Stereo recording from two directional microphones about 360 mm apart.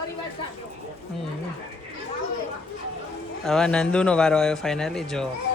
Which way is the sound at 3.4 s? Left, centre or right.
Centre.